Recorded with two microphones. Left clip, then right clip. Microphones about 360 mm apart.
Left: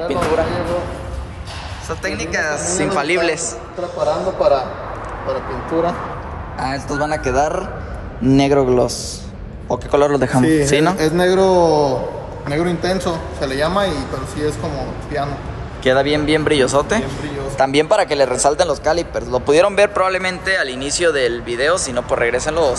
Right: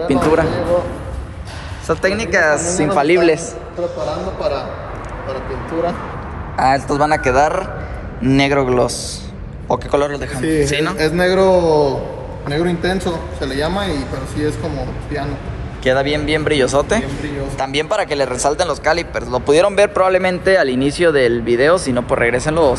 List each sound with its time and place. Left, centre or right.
0.0 s a man's voice: centre
1.9 s a man's voice: centre
4.4 s a man's voice: left
6.5 s a man's voice: centre
15.8 s a man's voice: centre